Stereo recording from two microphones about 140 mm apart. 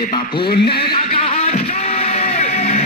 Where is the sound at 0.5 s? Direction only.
40° left (ahead or behind).